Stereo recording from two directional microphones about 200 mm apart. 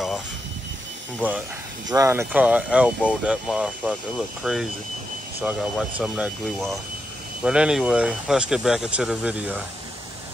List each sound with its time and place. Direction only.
1.9 s speech: 15° right (ahead or behind)